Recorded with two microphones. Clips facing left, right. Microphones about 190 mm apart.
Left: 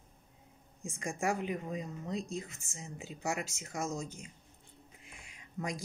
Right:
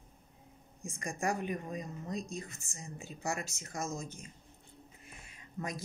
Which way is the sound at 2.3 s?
90° left.